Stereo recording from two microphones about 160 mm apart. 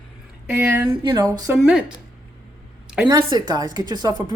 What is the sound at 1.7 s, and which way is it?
Speech, 5° right (ahead or behind).